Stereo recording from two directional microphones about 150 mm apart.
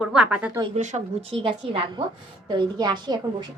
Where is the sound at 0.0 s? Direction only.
5° right (ahead or behind).